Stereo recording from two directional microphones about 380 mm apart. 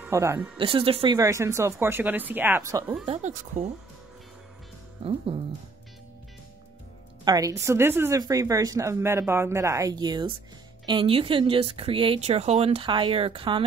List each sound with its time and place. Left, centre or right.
0.0 s speech: centre
3.2 s speech: centre
5.0 s speech: centre
7.2 s speech: centre